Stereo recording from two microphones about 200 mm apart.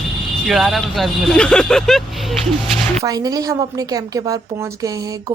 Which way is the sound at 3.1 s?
20° right (ahead or behind).